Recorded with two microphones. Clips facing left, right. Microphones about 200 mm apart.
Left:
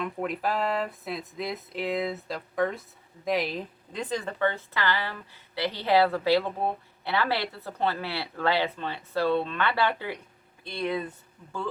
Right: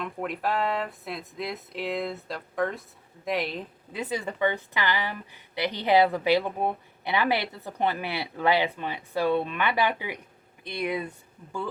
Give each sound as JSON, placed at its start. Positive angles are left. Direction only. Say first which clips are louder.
{"t": 0.0, "sound": "a woman's voice", "louder": "left 1 dB", "side_deg": 0}